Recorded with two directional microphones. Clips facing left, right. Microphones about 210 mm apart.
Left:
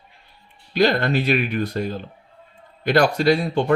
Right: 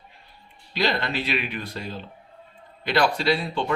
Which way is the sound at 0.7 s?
50° left (ahead or behind).